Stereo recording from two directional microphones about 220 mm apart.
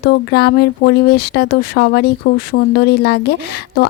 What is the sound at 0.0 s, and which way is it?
Speech, 50° left (ahead or behind).